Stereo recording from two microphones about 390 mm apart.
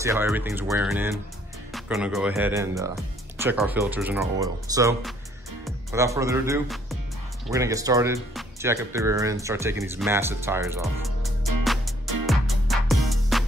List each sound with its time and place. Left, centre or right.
0.0 s speech: centre
11.6 s music: centre